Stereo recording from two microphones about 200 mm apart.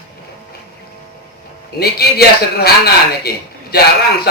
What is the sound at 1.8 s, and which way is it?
A man's voice, 55° left (ahead or behind).